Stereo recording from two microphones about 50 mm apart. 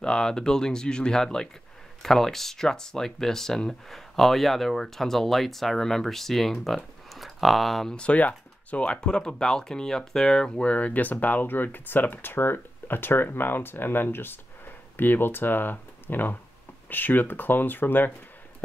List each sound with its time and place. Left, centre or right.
0.0 s speech: centre
7.9 s speech: left